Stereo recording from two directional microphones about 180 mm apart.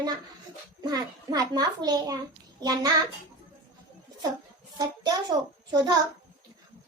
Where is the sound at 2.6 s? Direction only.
20° right (ahead or behind).